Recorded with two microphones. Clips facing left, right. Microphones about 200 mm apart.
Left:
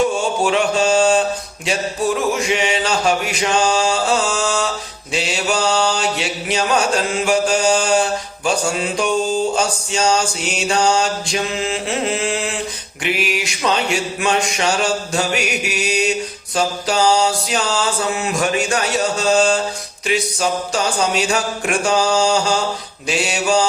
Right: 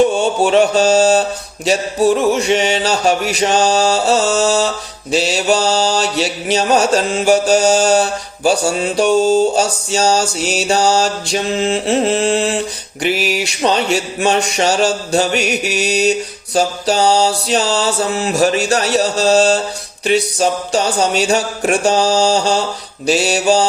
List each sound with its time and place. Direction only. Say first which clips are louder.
0.4 s mantra: right 5 dB; 35° right (ahead or behind)